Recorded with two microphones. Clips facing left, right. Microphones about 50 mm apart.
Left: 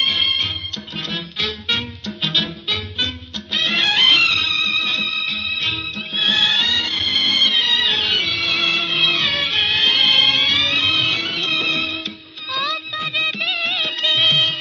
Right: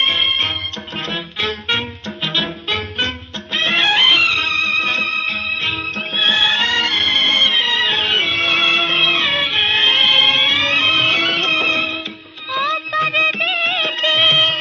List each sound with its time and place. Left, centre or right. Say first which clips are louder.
0.0 s music: right 3 dB; right
4.4 s music: right 3 dB; right
12.9 s music of bollywood: right 7 dB; right